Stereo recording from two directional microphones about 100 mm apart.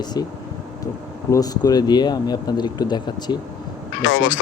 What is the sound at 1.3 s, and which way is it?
Speech, 40° left (ahead or behind).